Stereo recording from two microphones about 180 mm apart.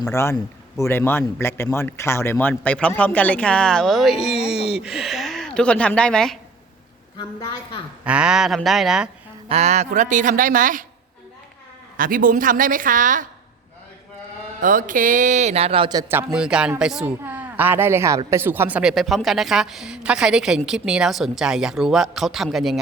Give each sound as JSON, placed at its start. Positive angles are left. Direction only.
{"t": 0.1, "sound": "speech", "side_deg": 15}
{"t": 4.4, "sound": "a sound", "side_deg": -5}
{"t": 8.0, "sound": "a woman's voice", "side_deg": -5}
{"t": 9.5, "sound": "speech", "side_deg": -35}
{"t": 11.9, "sound": "speech", "side_deg": -50}
{"t": 14.6, "sound": "a woman's voice", "side_deg": -45}